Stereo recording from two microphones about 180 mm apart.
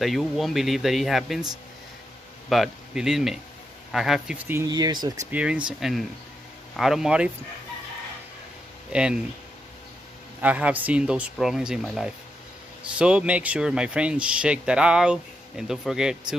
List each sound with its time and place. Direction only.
0.0 s speech: centre (ahead or behind)
2.5 s speech: centre (ahead or behind)
4.5 s speech: 20° right (ahead or behind)
5.3 s speech: 5° right (ahead or behind)
8.9 s speech: 5° right (ahead or behind)
10.4 s speech: 10° right (ahead or behind)